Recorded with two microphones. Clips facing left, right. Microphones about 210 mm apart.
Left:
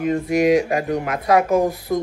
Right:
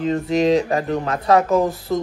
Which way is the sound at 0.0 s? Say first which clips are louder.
Even; 15° left (ahead or behind).